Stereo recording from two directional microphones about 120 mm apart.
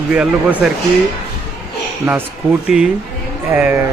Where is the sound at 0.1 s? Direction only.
10° right (ahead or behind).